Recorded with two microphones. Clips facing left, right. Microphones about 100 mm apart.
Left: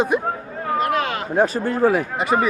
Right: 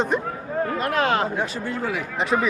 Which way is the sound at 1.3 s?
45° left (ahead or behind).